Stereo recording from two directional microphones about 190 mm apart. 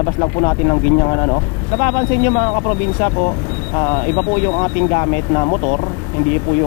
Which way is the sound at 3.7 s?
25° left (ahead or behind).